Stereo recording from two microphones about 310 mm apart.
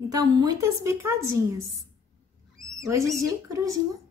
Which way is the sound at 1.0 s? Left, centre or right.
Right.